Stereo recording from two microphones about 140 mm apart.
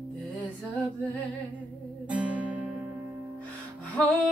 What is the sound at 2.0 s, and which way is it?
Music, 10° right (ahead or behind).